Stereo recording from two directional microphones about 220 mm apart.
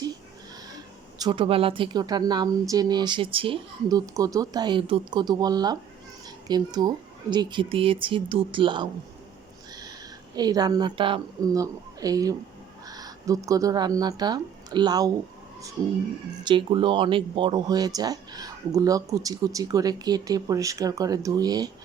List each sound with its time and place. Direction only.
1.2 s speech: 20° right (ahead or behind)
10.3 s speech: 15° right (ahead or behind)
16.4 s speech: 20° right (ahead or behind)